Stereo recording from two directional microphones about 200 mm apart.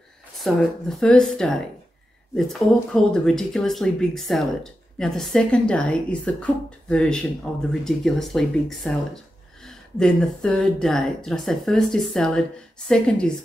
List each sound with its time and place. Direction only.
0.4 s speech: centre (ahead or behind)